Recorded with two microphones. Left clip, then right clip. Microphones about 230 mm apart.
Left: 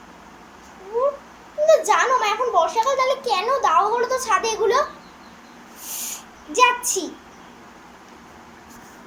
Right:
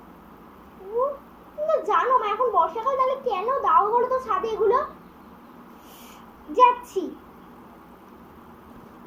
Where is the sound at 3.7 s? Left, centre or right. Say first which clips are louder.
Left 1 dB; centre.